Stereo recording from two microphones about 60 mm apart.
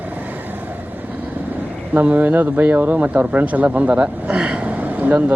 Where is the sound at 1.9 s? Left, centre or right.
Right.